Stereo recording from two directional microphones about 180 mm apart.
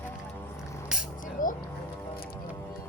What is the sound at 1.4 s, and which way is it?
Speech, 45° left (ahead or behind).